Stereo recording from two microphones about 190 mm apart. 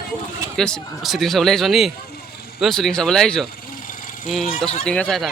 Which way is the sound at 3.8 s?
45° left (ahead or behind).